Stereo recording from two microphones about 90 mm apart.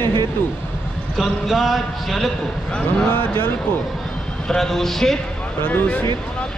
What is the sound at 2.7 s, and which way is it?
Speech, 10° left (ahead or behind).